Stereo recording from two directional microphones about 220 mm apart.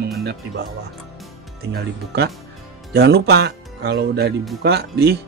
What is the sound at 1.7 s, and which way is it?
Speech, 50° right (ahead or behind).